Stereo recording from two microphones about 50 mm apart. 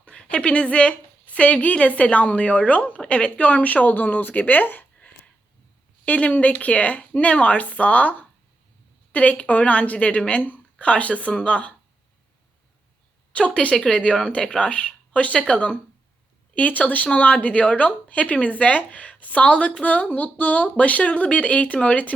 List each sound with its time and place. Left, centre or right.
0.0 s a sound: left
1.6 s speech: left
6.1 s speech: left
13.3 s speech: left